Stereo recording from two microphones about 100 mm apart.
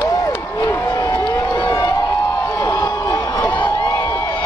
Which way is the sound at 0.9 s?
40° left (ahead or behind).